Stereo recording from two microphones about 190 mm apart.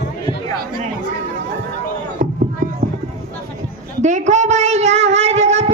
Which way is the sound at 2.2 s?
45° right (ahead or behind).